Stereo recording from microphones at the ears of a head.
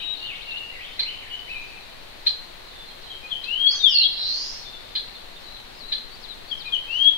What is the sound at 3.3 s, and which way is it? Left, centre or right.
Bird vocalization, left.